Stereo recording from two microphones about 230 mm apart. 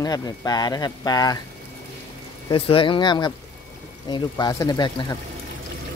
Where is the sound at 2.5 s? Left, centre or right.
Left.